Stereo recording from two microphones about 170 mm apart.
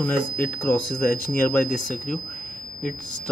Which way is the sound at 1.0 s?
55° left (ahead or behind).